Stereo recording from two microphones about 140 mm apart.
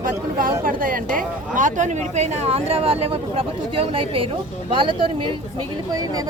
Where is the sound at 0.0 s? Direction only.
80° right.